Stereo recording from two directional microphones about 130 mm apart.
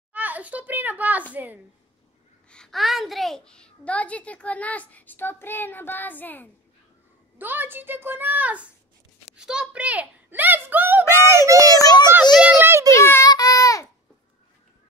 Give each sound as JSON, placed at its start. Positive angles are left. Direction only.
{"t": 0.1, "sound": "a child's voice", "side_deg": -10}
{"t": 2.5, "sound": "a child's voice", "side_deg": 5}
{"t": 7.3, "sound": "a child's voice", "side_deg": -15}
{"t": 11.6, "sound": "speech", "side_deg": 30}
{"t": 12.4, "sound": "a child's voice", "side_deg": -15}
{"t": 12.9, "sound": "a child's voice", "side_deg": 20}
{"t": 13.3, "sound": "baby cry", "side_deg": 25}